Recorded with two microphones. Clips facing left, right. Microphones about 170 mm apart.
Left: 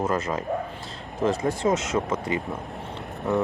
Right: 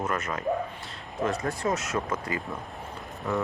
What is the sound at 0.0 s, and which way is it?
Speech, 30° left (ahead or behind).